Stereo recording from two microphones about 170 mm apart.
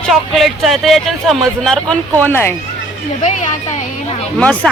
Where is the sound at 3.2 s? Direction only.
45° left (ahead or behind).